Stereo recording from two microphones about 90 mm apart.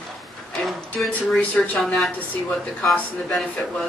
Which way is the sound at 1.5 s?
15° left (ahead or behind).